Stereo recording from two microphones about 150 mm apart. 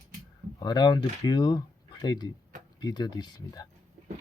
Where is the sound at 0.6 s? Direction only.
30° left (ahead or behind).